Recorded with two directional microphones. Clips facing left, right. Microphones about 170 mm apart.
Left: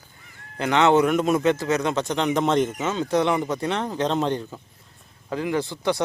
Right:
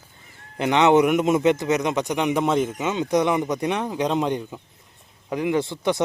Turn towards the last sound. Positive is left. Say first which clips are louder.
# right 2 dB
turn(degrees=-20)  # may be behind; listen again after turning